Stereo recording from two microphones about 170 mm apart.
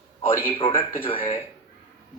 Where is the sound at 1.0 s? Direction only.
30° left (ahead or behind).